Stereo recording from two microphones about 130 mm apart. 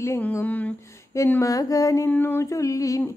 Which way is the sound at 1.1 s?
25° left (ahead or behind).